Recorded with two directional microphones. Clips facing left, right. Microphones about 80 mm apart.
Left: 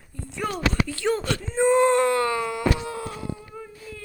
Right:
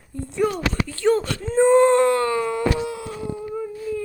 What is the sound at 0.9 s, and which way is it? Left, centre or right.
Speech, right.